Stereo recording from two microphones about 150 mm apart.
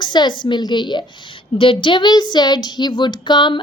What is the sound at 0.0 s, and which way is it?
A woman's voice, 30° left (ahead or behind).